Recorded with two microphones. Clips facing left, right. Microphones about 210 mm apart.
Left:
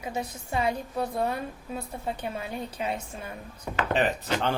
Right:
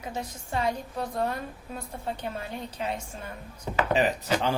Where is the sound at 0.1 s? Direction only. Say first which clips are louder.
Left 2 dB; 10° left (ahead or behind).